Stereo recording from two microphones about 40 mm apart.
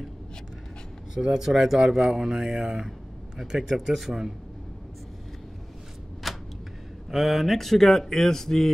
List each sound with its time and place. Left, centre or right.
1.1 s speech: centre
6.2 s a sound: centre
7.1 s speech: centre